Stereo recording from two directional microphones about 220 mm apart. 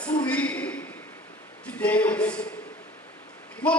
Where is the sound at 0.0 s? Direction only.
5° left (ahead or behind).